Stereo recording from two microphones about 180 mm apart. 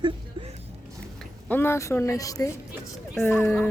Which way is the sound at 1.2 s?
10° left (ahead or behind).